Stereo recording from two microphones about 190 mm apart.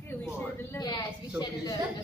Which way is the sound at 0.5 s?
20° left (ahead or behind).